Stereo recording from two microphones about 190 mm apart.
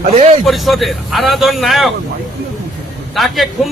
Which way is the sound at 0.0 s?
35° right (ahead or behind).